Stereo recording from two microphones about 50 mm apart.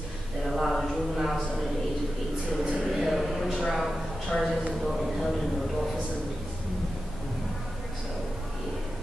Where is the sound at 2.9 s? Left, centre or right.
Centre.